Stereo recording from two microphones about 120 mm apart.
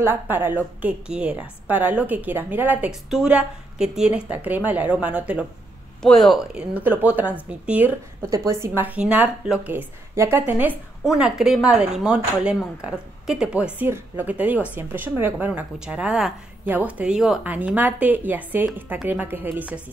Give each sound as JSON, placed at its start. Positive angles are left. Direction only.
{"t": 0.0, "sound": "speech", "side_deg": -20}
{"t": 2.9, "sound": "speech", "side_deg": -5}
{"t": 6.0, "sound": "speech", "side_deg": 0}
{"t": 6.7, "sound": "speech", "side_deg": -15}
{"t": 8.2, "sound": "speech", "side_deg": -25}